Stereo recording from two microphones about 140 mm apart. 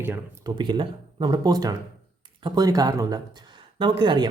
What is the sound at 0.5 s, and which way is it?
Speech, 35° right (ahead or behind).